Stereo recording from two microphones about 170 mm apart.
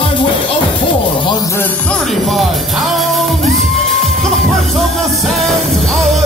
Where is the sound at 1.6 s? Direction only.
5° left (ahead or behind).